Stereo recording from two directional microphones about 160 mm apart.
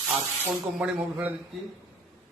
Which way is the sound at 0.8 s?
5° right (ahead or behind).